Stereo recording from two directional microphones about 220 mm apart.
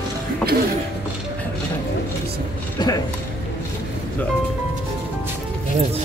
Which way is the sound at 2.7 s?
15° left (ahead or behind).